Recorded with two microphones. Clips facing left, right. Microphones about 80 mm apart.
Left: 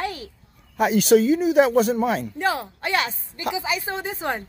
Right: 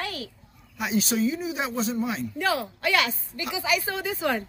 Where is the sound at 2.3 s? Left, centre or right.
Left.